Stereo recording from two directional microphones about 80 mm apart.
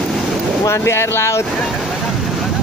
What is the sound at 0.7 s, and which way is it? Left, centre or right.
Speech, left.